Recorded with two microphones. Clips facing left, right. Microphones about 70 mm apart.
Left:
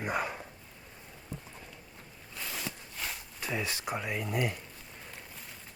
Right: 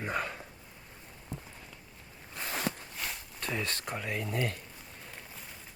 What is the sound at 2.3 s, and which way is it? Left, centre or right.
Walk, right.